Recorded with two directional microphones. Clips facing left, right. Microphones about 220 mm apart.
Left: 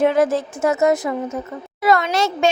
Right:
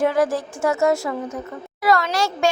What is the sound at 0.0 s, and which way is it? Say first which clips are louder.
A child's voice: left 3 dB; 20° left (ahead or behind).